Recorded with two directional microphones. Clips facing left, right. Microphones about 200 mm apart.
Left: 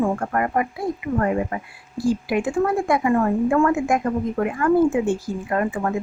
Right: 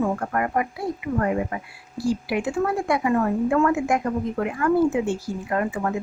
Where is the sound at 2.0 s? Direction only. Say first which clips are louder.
Left 3 dB; 50° left (ahead or behind).